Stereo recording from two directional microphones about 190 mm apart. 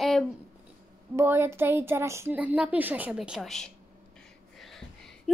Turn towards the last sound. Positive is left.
turn(degrees=0)  # may be behind; listen again after turning